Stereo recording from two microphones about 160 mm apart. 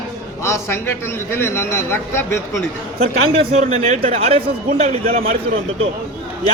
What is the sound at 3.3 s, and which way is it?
A man's voice, 35° right (ahead or behind).